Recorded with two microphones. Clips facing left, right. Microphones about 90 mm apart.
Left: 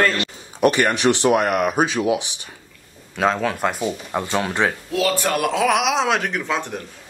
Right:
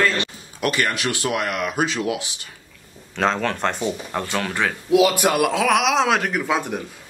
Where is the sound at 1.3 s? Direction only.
50° left (ahead or behind).